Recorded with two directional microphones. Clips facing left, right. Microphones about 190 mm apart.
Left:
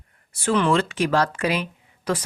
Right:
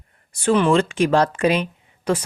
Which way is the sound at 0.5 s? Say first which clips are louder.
Right 3 dB; 15° right (ahead or behind).